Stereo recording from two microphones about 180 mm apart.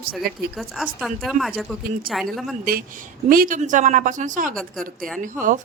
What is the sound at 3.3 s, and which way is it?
A woman's voice, 50° right (ahead or behind).